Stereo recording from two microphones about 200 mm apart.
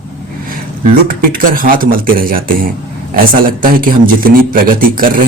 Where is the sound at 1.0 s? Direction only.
45° right (ahead or behind).